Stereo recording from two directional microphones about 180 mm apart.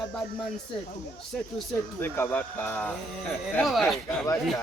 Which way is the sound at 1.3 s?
Centre (ahead or behind).